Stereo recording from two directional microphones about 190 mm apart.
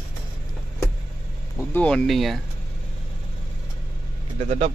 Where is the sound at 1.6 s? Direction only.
5° left (ahead or behind).